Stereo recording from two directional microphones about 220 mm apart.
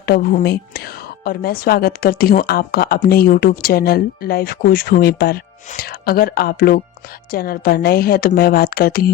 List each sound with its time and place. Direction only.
0.0 s a woman's voice: 45° left (ahead or behind)